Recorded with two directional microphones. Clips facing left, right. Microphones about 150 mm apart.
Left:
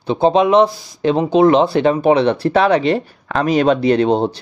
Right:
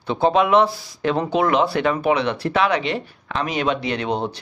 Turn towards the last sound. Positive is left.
turn(degrees=35)  # may be behind; listen again after turning